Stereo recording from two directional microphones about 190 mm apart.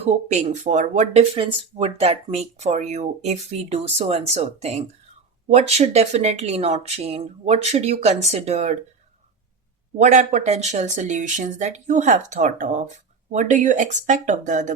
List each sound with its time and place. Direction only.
0.0 s speech: 35° right (ahead or behind)
10.0 s speech: 40° right (ahead or behind)